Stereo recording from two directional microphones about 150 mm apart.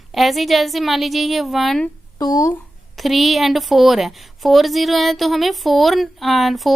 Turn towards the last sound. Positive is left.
turn(degrees=0)  # may be behind; listen again after turning